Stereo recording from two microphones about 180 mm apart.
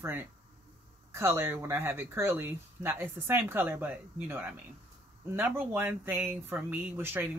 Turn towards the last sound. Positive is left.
turn(degrees=-10)  # may be behind; listen again after turning